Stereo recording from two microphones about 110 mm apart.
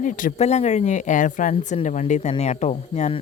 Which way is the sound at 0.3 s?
85° left.